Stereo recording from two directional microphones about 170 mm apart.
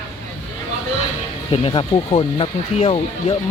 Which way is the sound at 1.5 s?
30° left (ahead or behind).